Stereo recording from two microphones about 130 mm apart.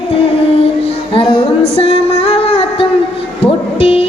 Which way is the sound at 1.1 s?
45° left (ahead or behind).